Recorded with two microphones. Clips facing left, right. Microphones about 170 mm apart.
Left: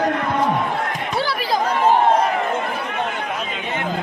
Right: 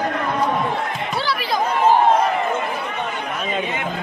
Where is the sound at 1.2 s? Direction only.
45° left (ahead or behind).